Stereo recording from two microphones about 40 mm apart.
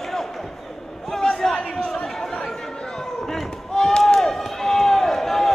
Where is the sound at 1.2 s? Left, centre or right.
Centre.